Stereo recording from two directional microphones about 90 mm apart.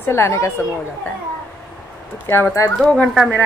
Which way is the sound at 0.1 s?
30° left (ahead or behind).